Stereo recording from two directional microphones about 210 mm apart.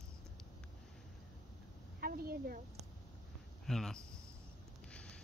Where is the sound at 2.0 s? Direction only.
45° right (ahead or behind).